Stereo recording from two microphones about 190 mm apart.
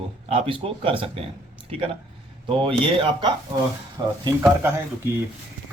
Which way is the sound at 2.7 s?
25° right (ahead or behind).